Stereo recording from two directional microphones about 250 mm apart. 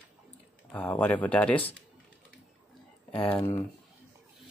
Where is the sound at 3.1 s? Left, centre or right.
Centre.